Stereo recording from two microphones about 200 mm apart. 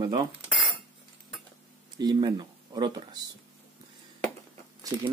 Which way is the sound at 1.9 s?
20° right (ahead or behind).